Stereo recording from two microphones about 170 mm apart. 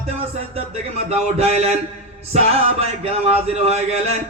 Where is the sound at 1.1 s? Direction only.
40° right (ahead or behind).